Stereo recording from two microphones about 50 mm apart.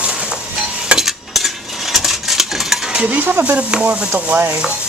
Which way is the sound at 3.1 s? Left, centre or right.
Right.